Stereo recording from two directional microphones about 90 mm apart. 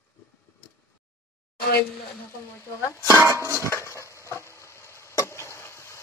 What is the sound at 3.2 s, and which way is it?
Music, 30° right (ahead or behind).